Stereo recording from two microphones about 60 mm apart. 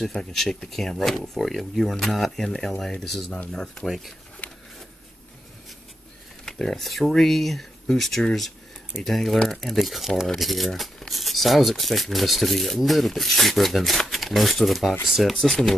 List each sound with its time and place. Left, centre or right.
0.0 s speech: centre
4.4 s a sound: left
6.4 s speech: centre